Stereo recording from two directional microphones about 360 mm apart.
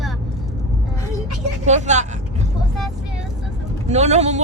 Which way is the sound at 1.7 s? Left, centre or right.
Centre.